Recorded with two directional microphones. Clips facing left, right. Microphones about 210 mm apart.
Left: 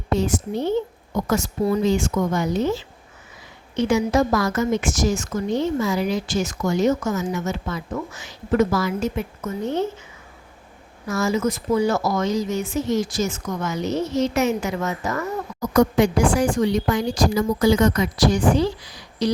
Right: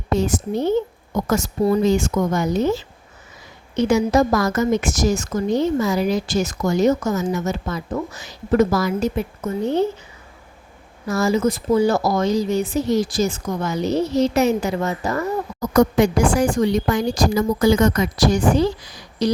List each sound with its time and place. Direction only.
0.1 s a woman's voice: 45° right (ahead or behind)
11.1 s a woman's voice: 35° right (ahead or behind)
15.7 s speech: 45° right (ahead or behind)